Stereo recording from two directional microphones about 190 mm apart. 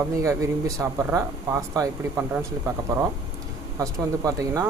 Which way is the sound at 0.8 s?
15° right (ahead or behind).